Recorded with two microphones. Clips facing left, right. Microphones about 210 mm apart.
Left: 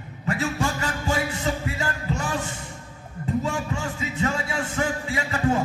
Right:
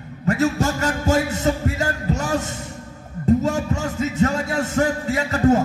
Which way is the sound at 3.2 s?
40° right (ahead or behind).